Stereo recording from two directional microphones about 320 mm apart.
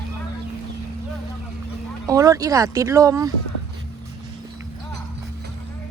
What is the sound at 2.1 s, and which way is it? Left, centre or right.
Speech, centre.